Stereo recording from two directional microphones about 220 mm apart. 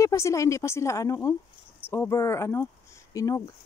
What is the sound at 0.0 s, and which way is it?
Speech, 15° left (ahead or behind).